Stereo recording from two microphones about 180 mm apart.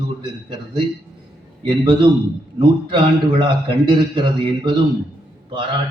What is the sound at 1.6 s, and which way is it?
A man's voice, 25° right (ahead or behind).